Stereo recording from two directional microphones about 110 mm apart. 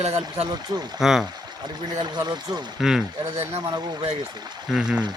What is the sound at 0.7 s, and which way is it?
Speech, 35° right (ahead or behind).